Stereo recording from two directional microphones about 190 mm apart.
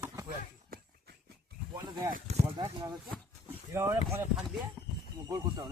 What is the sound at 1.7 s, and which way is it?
Speech, 20° right (ahead or behind).